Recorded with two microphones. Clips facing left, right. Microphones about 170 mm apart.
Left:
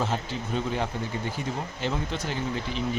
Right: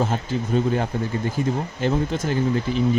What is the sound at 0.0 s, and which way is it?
Speech, 50° right (ahead or behind).